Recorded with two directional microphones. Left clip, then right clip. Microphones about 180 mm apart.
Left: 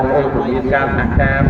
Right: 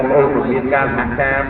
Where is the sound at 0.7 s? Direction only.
25° right (ahead or behind).